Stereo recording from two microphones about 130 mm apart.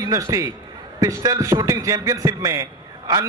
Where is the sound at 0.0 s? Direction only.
25° right (ahead or behind).